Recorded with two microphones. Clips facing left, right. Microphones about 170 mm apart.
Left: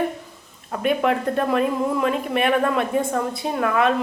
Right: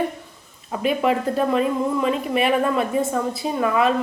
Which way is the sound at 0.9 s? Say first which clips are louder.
Even; centre (ahead or behind).